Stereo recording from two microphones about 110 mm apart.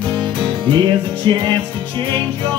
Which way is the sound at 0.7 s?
45° right (ahead or behind).